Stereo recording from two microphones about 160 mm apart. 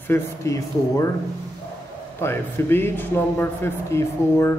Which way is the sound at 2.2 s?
15° left (ahead or behind).